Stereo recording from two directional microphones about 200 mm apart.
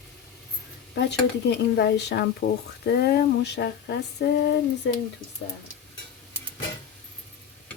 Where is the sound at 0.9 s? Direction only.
60° left (ahead or behind).